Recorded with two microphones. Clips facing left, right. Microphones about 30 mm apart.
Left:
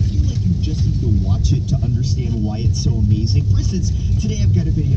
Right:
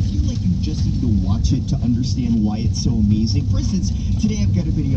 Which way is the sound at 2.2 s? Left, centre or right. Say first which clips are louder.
Right 5 dB; centre.